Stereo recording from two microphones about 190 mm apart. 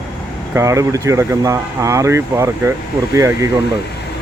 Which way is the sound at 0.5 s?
15° right (ahead or behind).